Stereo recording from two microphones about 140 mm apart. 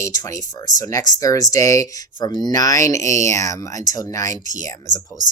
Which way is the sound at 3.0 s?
55° right (ahead or behind).